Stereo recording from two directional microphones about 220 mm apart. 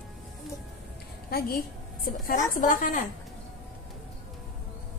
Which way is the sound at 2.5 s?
40° left (ahead or behind).